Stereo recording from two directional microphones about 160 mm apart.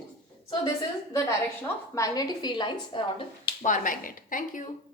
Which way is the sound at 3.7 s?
55° left (ahead or behind).